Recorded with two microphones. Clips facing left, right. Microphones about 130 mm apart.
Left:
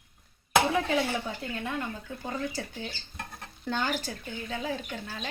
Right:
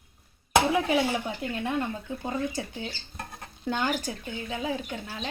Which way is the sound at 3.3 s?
10° right (ahead or behind).